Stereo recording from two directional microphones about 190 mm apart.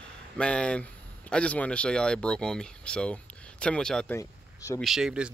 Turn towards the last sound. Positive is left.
turn(degrees=-5)  # may be behind; listen again after turning